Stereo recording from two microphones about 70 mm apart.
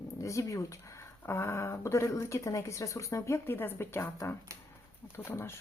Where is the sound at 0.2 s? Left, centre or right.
Left.